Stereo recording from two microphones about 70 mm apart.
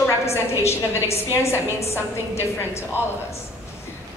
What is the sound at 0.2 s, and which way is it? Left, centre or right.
Speech, left.